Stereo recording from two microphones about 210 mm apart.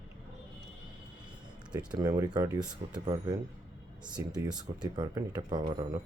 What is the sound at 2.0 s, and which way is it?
Speech, 15° right (ahead or behind).